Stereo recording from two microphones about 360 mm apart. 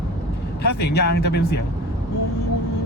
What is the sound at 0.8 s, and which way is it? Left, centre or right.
Speech, left.